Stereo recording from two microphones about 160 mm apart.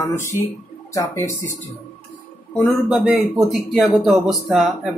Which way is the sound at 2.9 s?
Centre (ahead or behind).